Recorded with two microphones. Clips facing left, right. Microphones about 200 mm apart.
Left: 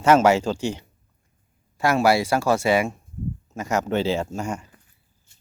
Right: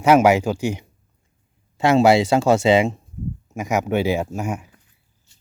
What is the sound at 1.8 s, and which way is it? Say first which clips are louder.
Speech: right 5 dB; 25° right (ahead or behind).